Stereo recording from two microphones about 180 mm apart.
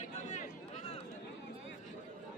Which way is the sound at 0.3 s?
40° left (ahead or behind).